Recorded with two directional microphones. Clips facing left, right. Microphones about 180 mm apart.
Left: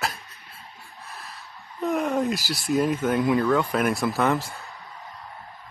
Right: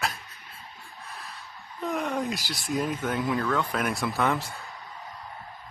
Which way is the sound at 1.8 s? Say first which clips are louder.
Left 5 dB; 5° left (ahead or behind).